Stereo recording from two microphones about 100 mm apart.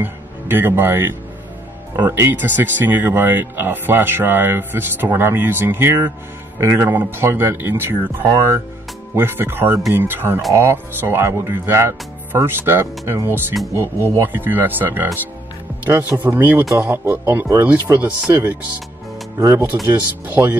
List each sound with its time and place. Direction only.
0.0 s speech: 20° right (ahead or behind)
19.9 s speech: 15° right (ahead or behind)